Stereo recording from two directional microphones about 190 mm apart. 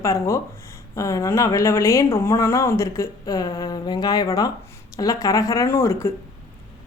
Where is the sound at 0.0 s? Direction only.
15° left (ahead or behind).